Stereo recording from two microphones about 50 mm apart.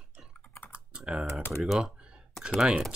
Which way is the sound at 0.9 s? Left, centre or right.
Centre.